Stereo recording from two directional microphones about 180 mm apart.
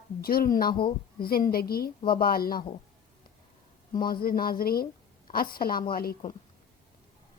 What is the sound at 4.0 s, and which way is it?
A woman's voice, 55° left (ahead or behind).